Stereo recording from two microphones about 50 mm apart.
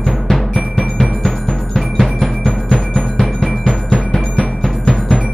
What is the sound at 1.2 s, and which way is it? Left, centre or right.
Music, centre.